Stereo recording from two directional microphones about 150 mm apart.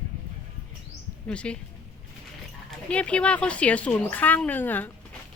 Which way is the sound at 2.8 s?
10° left (ahead or behind).